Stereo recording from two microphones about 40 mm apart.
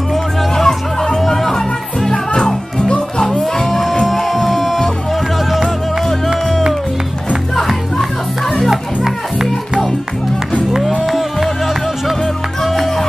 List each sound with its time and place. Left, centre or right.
0.1 s music: centre
2.0 s music: left
3.3 s music: centre
6.0 s music: centre
8.6 s music: centre